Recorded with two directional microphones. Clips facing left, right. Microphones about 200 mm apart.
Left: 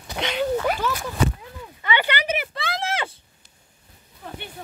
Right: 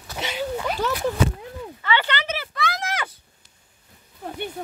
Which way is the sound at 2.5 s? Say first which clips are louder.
Even; 30° left (ahead or behind).